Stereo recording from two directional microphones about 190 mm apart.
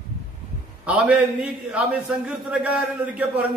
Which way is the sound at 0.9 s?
5° right (ahead or behind).